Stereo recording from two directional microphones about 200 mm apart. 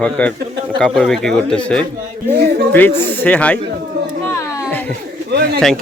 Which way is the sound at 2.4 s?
55° right (ahead or behind).